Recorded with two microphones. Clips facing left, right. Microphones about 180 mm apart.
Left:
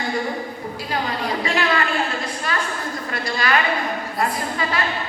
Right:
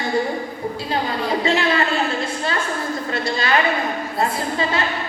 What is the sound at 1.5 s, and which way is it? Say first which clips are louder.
Speech: right 2 dB; 25° right (ahead or behind).